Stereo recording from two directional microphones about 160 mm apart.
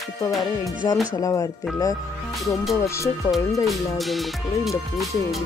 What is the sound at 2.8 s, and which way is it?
Speech, 20° left (ahead or behind).